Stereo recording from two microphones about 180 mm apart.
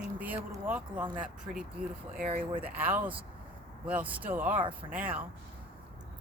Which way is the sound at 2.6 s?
10° right (ahead or behind).